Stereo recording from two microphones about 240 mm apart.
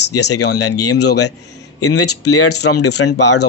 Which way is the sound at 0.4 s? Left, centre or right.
Left.